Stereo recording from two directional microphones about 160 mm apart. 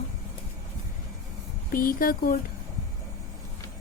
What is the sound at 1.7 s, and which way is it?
Speech, 65° left (ahead or behind).